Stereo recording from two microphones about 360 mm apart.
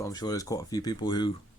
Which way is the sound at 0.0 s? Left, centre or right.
Centre.